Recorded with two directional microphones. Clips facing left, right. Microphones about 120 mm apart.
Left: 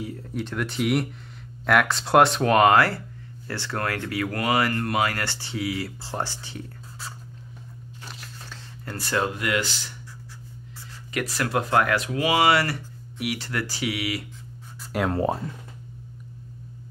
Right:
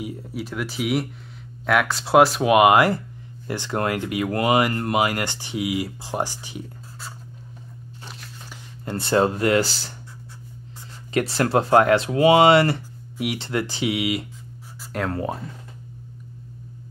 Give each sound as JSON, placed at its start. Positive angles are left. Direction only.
{"t": 0.0, "sound": "speech", "side_deg": -15}
{"t": 7.0, "sound": "a sound", "side_deg": 0}
{"t": 8.8, "sound": "speech", "side_deg": -25}
{"t": 11.1, "sound": "speech", "side_deg": -30}
{"t": 14.8, "sound": "a sound", "side_deg": 5}
{"t": 15.0, "sound": "speech", "side_deg": 30}